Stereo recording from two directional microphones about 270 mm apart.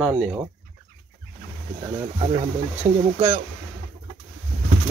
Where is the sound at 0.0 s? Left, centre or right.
Centre.